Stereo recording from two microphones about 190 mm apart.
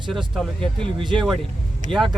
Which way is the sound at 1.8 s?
40° right (ahead or behind).